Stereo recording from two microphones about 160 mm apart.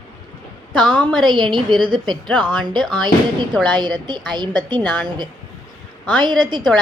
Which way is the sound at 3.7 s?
30° right (ahead or behind).